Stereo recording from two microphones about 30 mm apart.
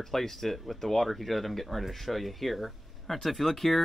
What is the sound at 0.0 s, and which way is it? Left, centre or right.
Speech, centre.